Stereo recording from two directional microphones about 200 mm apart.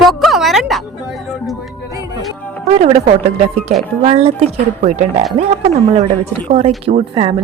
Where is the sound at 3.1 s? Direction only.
35° right (ahead or behind).